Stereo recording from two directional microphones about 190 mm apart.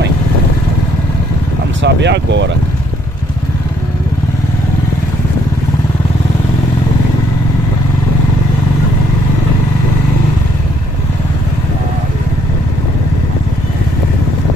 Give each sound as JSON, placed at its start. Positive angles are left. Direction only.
{"t": 1.8, "sound": "speech", "side_deg": -65}